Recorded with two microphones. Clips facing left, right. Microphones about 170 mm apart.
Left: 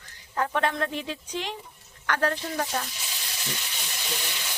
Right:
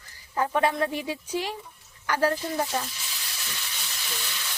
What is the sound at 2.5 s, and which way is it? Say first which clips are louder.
Speech: right 2 dB; 20° right (ahead or behind).